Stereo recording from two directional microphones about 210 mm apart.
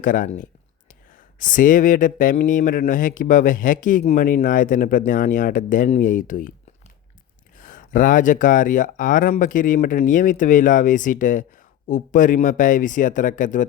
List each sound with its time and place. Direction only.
0.0 s speech: 40° left (ahead or behind)
7.6 s speech: 40° left (ahead or behind)